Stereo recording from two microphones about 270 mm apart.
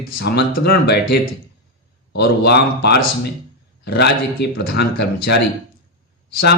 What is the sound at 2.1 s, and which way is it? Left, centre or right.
Speech, left.